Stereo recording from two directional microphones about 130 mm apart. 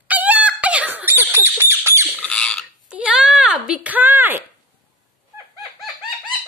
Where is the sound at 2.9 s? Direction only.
10° right (ahead or behind).